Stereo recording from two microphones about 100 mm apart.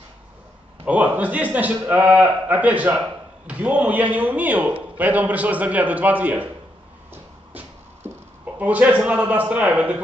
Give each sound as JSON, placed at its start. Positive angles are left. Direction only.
{"t": 0.8, "sound": "a man's voice", "side_deg": -15}
{"t": 7.1, "sound": "music", "side_deg": -20}
{"t": 8.5, "sound": "a man's voice", "side_deg": -15}